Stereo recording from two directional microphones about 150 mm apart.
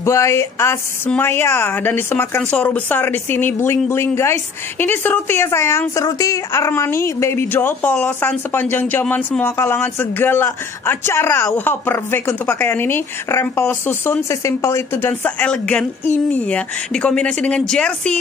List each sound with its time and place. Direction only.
0.0 s a woman's voice: 20° left (ahead or behind)